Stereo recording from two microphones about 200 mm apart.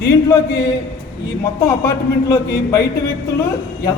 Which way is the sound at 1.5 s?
15° left (ahead or behind).